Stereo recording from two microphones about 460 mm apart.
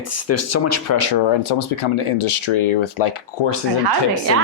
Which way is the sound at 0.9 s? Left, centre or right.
Left.